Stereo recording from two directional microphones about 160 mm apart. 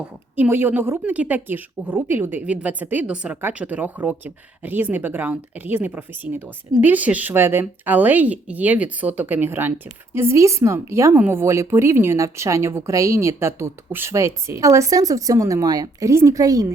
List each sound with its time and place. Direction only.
0.0 s speech: 10° right (ahead or behind)